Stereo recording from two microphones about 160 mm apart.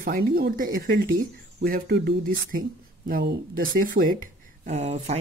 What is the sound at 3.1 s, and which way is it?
Speech, 75° right (ahead or behind).